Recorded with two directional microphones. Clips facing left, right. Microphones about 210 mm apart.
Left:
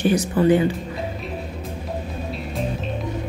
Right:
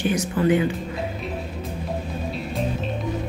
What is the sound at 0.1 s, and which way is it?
Speech, 35° left (ahead or behind).